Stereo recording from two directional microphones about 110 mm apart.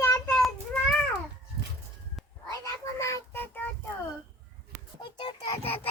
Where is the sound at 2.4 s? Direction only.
30° left (ahead or behind).